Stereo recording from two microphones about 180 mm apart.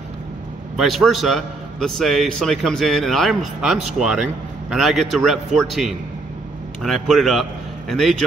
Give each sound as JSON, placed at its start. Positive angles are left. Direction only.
{"t": 0.7, "sound": "a man's voice", "side_deg": 0}